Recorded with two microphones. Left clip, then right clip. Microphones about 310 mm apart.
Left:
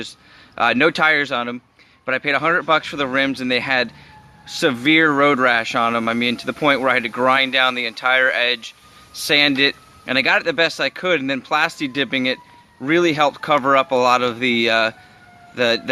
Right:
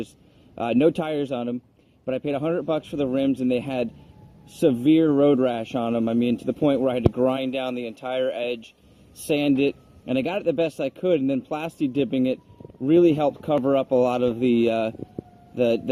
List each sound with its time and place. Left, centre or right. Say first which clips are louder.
0.5 s speech: left 5 dB; left